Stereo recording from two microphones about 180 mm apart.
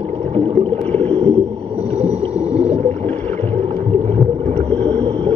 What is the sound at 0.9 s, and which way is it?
Rowboat, 10° left (ahead or behind).